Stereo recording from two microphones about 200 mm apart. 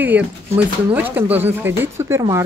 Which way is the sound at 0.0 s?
10° right (ahead or behind).